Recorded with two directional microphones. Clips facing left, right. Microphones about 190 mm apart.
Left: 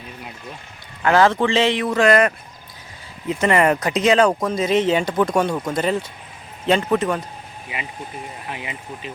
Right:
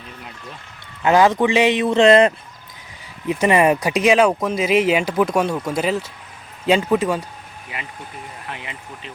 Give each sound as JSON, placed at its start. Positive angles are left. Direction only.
{"t": 1.0, "sound": "speech", "side_deg": -15}
{"t": 8.4, "sound": "speech", "side_deg": 10}